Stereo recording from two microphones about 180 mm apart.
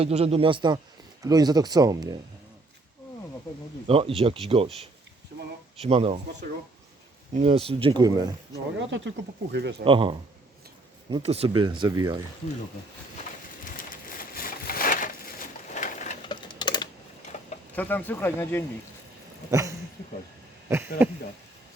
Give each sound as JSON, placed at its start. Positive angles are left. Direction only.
{"t": 0.0, "sound": "speech", "side_deg": -35}
{"t": 3.8, "sound": "speech", "side_deg": -30}
{"t": 7.3, "sound": "speech", "side_deg": -35}
{"t": 8.9, "sound": "speech", "side_deg": -80}
{"t": 9.8, "sound": "speech", "side_deg": -30}
{"t": 13.7, "sound": "a sound", "side_deg": 50}
{"t": 15.7, "sound": "bird", "side_deg": 45}
{"t": 16.2, "sound": "a sound", "side_deg": 25}
{"t": 17.3, "sound": "a sound", "side_deg": 40}
{"t": 17.7, "sound": "speech", "side_deg": 10}
{"t": 19.5, "sound": "speech", "side_deg": -15}